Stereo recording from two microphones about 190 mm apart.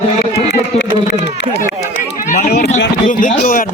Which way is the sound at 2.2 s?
40° left (ahead or behind).